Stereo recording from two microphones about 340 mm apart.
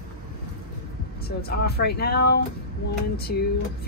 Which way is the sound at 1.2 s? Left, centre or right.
Left.